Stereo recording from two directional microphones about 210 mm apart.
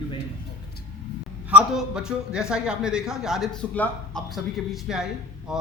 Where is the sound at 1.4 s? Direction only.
5° right (ahead or behind).